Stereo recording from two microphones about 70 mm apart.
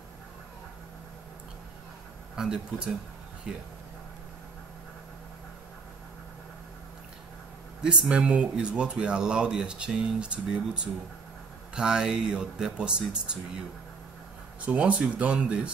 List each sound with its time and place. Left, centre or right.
2.3 s speech: centre
7.8 s speech: centre
14.7 s speech: centre